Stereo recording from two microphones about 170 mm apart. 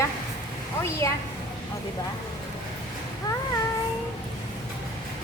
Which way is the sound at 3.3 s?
20° left (ahead or behind).